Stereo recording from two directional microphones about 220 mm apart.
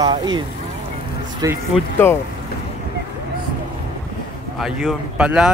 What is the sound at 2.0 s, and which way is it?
Speech, 10° left (ahead or behind).